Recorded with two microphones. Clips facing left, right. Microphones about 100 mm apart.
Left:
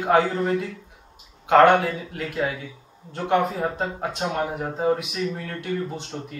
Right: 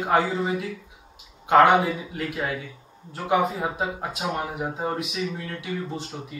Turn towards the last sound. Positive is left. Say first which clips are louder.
# left 1 dB
turn(degrees=0)  # may be behind; listen again after turning